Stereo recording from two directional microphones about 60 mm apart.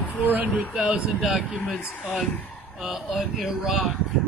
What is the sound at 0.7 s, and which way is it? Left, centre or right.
Speech, centre.